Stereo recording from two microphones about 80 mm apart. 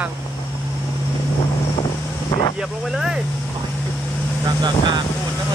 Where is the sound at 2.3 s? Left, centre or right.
Left.